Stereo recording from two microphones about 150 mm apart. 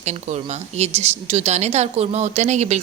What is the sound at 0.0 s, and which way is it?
A woman's voice, 50° right (ahead or behind).